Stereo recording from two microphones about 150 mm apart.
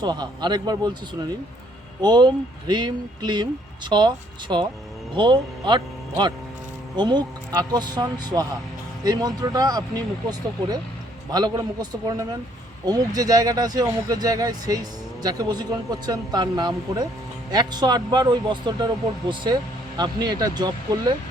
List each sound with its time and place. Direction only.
0.0 s speech: 30° right (ahead or behind)
2.0 s speech: 30° right (ahead or behind)
20.0 s speech: 30° right (ahead or behind)